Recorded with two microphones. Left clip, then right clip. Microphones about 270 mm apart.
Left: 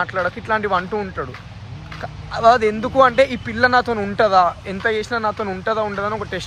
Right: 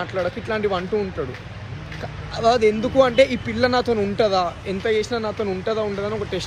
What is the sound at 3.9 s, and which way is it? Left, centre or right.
Speech, centre.